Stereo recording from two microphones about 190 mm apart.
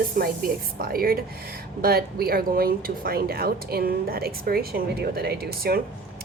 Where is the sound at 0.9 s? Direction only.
50° right (ahead or behind).